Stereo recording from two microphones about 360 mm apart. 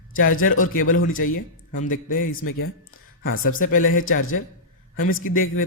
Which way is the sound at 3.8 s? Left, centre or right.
Left.